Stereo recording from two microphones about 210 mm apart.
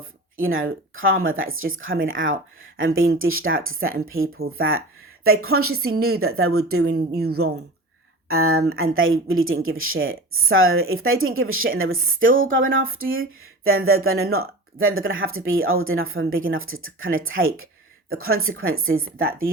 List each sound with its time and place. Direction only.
0.0 s a sound: 70° right (ahead or behind)
0.9 s speech: 75° right (ahead or behind)
5.2 s speech: 90° right
6.9 s speech: 50° right (ahead or behind)
8.3 s a woman's voice: 90° right